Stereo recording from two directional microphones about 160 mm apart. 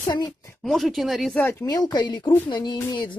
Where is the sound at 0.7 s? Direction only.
Centre (ahead or behind).